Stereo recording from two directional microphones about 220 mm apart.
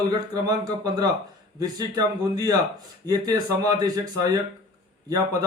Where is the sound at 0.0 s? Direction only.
15° right (ahead or behind).